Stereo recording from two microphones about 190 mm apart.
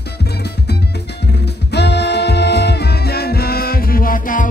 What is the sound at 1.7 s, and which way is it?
Music, 60° left (ahead or behind).